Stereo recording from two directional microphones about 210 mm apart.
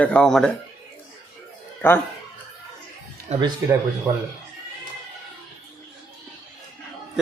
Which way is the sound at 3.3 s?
30° right (ahead or behind).